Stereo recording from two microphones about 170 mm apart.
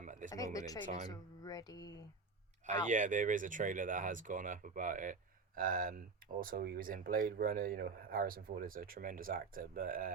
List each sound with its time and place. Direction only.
0.0 s a sound: 50° right (ahead or behind)
0.3 s speech: 20° left (ahead or behind)
2.6 s speech: 45° right (ahead or behind)